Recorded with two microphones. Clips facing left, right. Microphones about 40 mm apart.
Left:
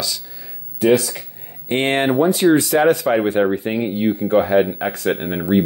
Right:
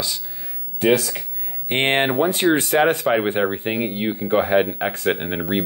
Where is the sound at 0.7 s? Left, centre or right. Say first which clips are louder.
Left 3 dB; right.